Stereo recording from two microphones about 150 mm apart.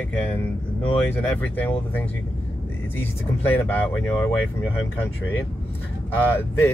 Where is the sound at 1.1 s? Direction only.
10° left (ahead or behind).